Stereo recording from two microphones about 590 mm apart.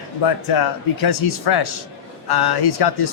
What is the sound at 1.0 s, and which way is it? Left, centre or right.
Speech, left.